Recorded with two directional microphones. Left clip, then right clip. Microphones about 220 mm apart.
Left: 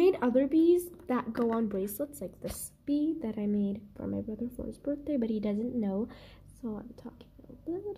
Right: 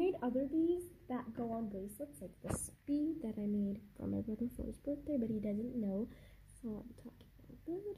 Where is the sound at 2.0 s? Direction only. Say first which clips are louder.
Left 11 dB; 25° left (ahead or behind).